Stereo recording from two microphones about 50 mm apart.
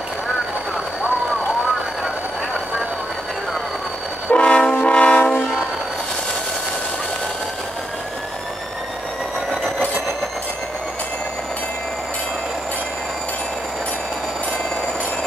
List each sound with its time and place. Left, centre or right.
4.3 s train: centre